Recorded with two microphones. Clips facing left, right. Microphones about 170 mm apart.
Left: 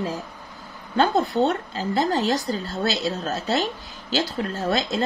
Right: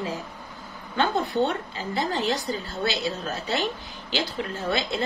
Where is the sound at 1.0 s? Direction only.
40° left (ahead or behind).